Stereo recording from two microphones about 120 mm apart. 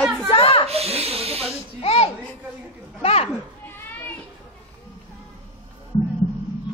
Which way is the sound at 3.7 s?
15° left (ahead or behind).